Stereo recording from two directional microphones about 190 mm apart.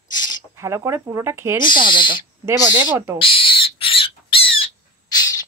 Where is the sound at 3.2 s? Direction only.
25° left (ahead or behind).